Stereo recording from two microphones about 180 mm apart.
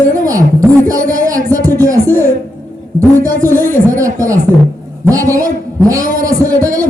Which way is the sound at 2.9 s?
20° right (ahead or behind).